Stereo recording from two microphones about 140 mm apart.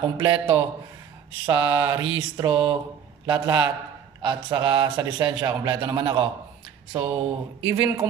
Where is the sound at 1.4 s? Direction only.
35° right (ahead or behind).